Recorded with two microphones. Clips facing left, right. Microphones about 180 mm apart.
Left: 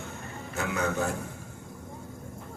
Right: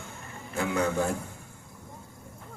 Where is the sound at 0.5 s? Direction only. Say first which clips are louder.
Right 3 dB; 30° right (ahead or behind).